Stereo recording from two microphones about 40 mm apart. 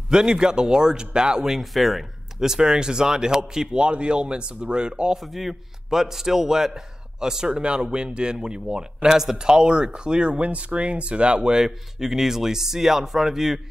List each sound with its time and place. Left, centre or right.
0.1 s speech: centre
1.4 s speech: centre
2.4 s speech: centre
5.2 s a man's voice: centre
9.5 s speech: right
11.6 s a man's voice: centre